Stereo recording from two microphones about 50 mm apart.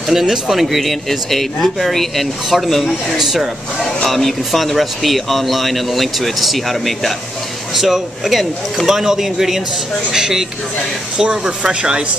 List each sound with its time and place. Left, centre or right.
0.1 s speech: centre